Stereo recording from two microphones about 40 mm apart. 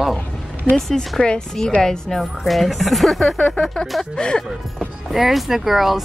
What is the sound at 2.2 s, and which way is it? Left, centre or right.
Speech, centre.